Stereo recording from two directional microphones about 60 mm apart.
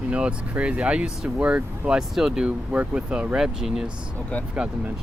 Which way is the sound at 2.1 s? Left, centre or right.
Centre.